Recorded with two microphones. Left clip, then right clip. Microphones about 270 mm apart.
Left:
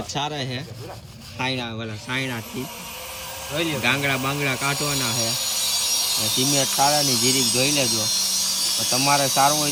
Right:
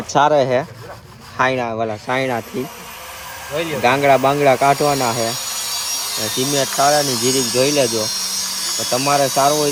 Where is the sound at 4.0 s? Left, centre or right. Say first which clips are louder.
Right 10 dB; right.